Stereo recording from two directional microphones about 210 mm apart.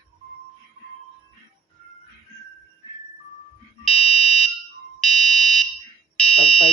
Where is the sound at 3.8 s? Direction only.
Centre (ahead or behind).